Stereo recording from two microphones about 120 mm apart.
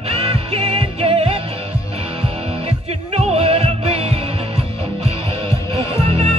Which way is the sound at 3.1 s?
55° right (ahead or behind).